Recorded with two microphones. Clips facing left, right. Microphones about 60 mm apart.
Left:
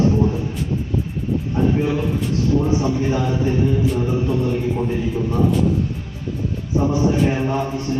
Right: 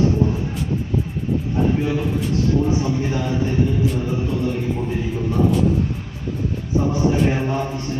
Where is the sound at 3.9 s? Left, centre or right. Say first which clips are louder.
Left 3 dB; centre.